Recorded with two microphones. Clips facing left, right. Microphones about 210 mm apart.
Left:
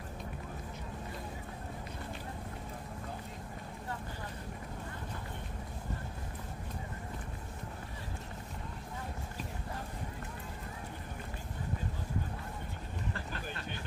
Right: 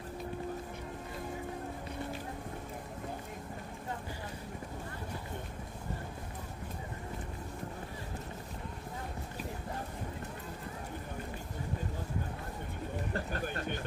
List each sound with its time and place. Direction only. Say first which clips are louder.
13.1 s vehicle: right 5 dB; 45° right (ahead or behind)